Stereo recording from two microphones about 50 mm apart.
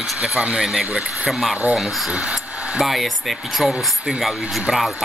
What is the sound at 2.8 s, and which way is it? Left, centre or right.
Speech, centre.